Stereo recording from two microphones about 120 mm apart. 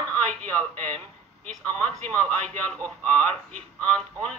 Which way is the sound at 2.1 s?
10° left (ahead or behind).